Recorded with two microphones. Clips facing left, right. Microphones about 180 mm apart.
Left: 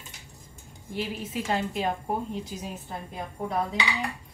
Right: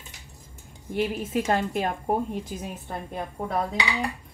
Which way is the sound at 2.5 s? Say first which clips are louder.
Right 3 dB; 55° right (ahead or behind).